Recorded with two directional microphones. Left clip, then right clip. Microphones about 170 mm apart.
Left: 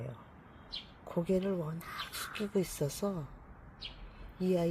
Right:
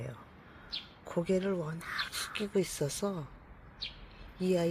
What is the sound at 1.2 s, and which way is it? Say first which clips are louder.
Speech: right 1 dB; 5° left (ahead or behind).